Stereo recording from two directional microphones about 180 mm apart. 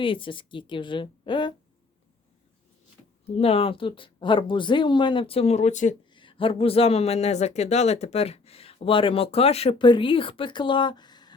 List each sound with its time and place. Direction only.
0.0 s speech: 30° left (ahead or behind)
3.3 s speech: 35° left (ahead or behind)
6.1 s speech: 30° left (ahead or behind)